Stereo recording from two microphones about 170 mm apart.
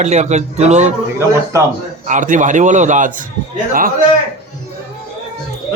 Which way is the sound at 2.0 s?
50° right (ahead or behind).